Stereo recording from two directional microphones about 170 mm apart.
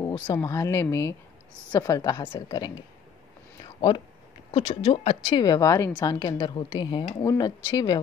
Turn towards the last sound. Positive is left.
turn(degrees=25)  # may be behind; listen again after turning